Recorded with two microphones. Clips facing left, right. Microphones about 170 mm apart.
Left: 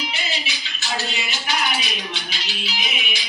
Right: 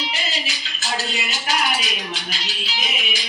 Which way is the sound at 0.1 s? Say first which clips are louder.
Right 1 dB; 40° right (ahead or behind).